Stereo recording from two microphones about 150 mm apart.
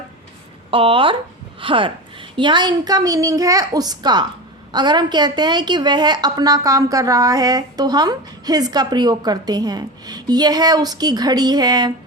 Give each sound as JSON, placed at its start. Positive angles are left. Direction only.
{"t": 0.7, "sound": "a woman's voice", "side_deg": -35}